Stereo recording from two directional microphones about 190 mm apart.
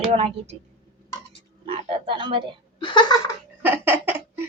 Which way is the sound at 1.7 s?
30° right (ahead or behind).